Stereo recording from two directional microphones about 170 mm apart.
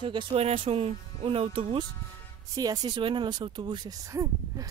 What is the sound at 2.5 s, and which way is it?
Speech, 25° right (ahead or behind).